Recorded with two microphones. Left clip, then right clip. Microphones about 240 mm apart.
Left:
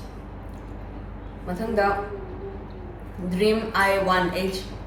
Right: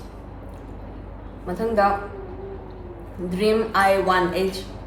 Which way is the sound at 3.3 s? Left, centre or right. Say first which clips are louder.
Right 2 dB; centre.